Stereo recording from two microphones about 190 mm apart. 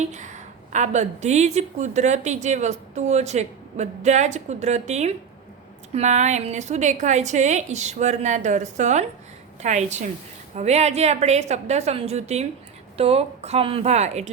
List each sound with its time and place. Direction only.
0.0 s a woman's voice: 40° right (ahead or behind)